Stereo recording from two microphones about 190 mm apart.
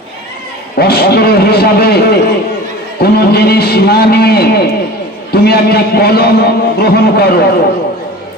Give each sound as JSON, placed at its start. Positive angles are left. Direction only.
{"t": 0.8, "sound": "a man's voice", "side_deg": 55}